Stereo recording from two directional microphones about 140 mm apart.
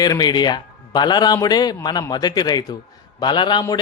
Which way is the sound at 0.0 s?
30° left (ahead or behind).